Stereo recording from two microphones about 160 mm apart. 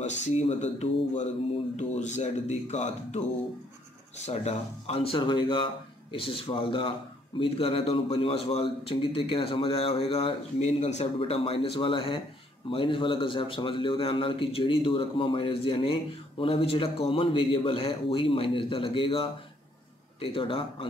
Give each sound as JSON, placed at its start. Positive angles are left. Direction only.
{"t": 0.3, "sound": "speech", "side_deg": 45}